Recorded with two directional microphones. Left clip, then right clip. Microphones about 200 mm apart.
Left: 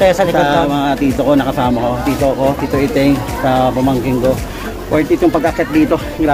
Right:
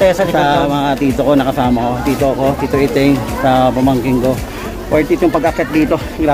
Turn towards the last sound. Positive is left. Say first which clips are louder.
# left 1 dB
turn(degrees=-10)  # may be behind; listen again after turning